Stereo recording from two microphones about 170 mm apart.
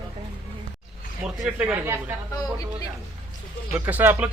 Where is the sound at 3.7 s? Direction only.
10° right (ahead or behind).